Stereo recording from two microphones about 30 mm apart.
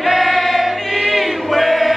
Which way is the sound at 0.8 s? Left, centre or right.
Centre.